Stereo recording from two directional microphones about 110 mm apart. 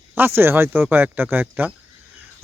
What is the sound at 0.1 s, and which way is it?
Speech, 20° right (ahead or behind).